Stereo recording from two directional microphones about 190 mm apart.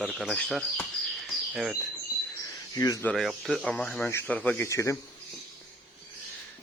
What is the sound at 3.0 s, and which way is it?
Speech, centre (ahead or behind).